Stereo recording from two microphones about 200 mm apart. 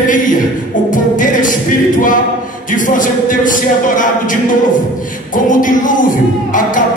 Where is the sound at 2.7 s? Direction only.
40° left (ahead or behind).